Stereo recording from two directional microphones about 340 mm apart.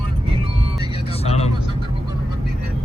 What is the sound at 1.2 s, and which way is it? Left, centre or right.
Vehicle, centre.